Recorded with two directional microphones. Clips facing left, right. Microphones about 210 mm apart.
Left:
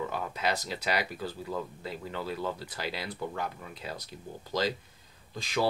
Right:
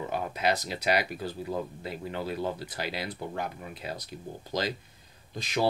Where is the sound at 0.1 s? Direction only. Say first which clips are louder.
Right 3 dB; 15° right (ahead or behind).